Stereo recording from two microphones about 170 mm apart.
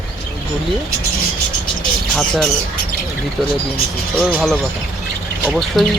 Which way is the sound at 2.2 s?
Centre (ahead or behind).